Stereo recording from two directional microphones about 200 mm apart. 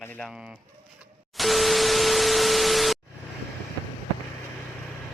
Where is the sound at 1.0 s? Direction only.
Centre (ahead or behind).